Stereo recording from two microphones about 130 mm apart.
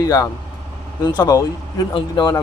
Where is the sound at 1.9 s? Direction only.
40° left (ahead or behind).